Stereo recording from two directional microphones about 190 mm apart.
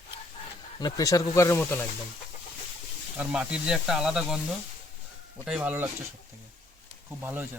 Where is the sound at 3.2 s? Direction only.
5° right (ahead or behind).